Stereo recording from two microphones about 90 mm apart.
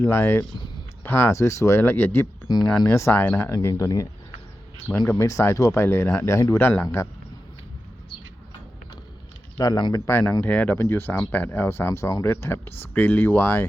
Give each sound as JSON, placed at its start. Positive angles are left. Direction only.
{"t": 0.0, "sound": "speech", "side_deg": 25}
{"t": 1.4, "sound": "speech", "side_deg": 35}
{"t": 3.5, "sound": "speech", "side_deg": 35}
{"t": 9.6, "sound": "speech", "side_deg": 40}
{"t": 10.1, "sound": "speech", "side_deg": 25}
{"t": 12.2, "sound": "speech", "side_deg": 25}
{"t": 12.9, "sound": "speech", "side_deg": 15}